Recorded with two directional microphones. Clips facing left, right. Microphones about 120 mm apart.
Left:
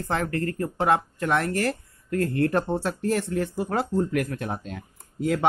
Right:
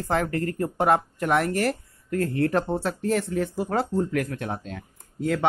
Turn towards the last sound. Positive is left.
turn(degrees=10)  # may be behind; listen again after turning